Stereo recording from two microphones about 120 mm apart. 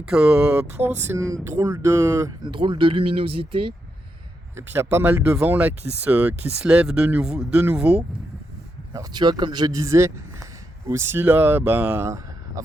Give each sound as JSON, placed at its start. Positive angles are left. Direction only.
{"t": 0.1, "sound": "speech", "side_deg": -5}
{"t": 0.5, "sound": "speech", "side_deg": -20}
{"t": 1.5, "sound": "speech", "side_deg": -30}
{"t": 2.4, "sound": "speech", "side_deg": -40}
{"t": 4.5, "sound": "speech", "side_deg": -20}
{"t": 8.9, "sound": "speech", "side_deg": -35}
{"t": 12.0, "sound": "a sound", "side_deg": -25}